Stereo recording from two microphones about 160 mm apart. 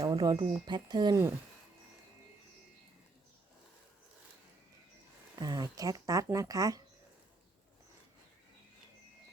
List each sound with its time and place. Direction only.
0.0 s speech: 25° right (ahead or behind)
5.4 s speech: 25° right (ahead or behind)